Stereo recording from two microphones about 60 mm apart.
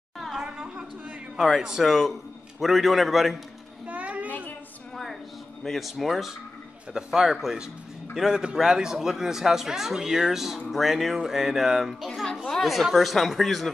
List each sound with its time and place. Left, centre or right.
0.4 s chatter: centre
1.3 s a man's voice: centre
3.8 s a sound: right
5.6 s a man's voice: centre